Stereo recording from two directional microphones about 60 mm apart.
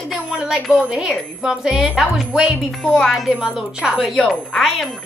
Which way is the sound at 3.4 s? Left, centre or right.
Centre.